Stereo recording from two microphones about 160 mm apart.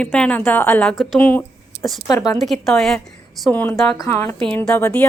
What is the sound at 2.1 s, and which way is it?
Speech, 20° left (ahead or behind).